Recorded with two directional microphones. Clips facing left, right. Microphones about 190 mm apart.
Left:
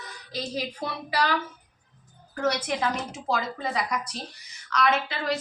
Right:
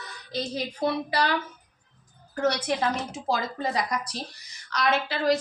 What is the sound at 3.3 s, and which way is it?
A woman's voice, 40° right (ahead or behind).